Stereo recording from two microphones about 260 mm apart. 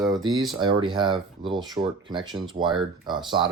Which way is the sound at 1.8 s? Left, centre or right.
Centre.